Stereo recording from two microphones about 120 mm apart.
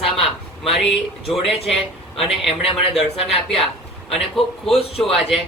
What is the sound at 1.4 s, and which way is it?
A man's voice, centre (ahead or behind).